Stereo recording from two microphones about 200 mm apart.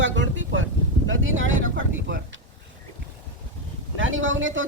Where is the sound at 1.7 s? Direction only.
50° right (ahead or behind).